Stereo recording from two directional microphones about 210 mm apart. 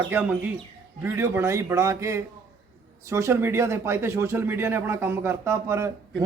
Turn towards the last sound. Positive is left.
turn(degrees=-15)  # may be behind; listen again after turning